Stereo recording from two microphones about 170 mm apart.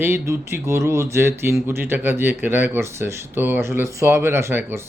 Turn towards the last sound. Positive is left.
turn(degrees=-15)  # may be behind; listen again after turning